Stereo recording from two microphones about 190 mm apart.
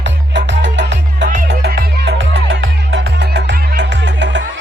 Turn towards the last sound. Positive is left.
turn(degrees=-70)  # may be behind; listen again after turning